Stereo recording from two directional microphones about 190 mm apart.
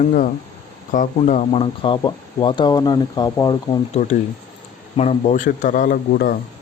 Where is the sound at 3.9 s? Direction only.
40° left (ahead or behind).